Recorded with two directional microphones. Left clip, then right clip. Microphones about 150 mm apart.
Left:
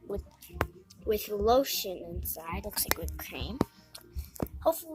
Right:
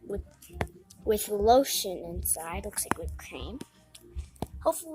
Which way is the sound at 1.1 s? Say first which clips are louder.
Right 4 dB; 30° right (ahead or behind).